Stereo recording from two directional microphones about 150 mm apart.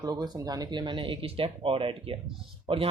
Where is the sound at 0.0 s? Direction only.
25° right (ahead or behind).